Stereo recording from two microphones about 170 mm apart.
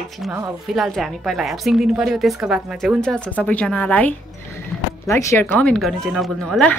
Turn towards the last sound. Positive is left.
turn(degrees=5)  # may be behind; listen again after turning